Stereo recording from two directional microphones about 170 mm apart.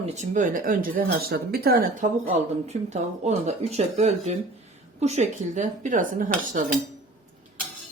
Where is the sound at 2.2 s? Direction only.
40° right (ahead or behind).